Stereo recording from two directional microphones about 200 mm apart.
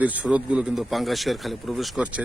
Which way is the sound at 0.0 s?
5° right (ahead or behind).